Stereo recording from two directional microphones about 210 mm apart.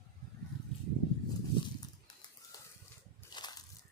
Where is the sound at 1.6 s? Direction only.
20° left (ahead or behind).